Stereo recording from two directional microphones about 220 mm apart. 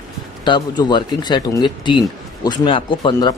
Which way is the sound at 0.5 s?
20° left (ahead or behind).